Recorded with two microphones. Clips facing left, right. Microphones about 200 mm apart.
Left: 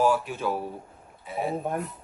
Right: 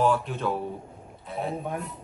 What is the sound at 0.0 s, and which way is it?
A man's voice, 5° left (ahead or behind).